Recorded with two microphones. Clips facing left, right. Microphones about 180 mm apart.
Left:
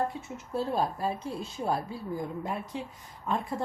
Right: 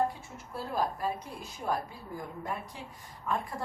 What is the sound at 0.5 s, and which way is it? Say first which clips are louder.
A woman's voice: left 4 dB; 25° left (ahead or behind).